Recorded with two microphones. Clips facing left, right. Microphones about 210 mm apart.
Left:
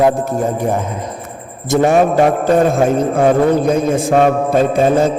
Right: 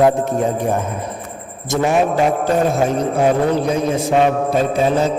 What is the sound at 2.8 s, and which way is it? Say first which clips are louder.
A man's voice: left 3 dB; 50° left (ahead or behind).